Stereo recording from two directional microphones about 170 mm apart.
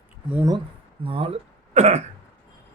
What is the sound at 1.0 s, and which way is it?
Speech, 30° right (ahead or behind).